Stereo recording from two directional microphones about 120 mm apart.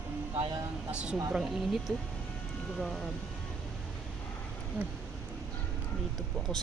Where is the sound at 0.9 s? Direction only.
10° right (ahead or behind).